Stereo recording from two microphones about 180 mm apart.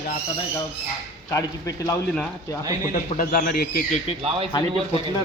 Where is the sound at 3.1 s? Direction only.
50° left (ahead or behind).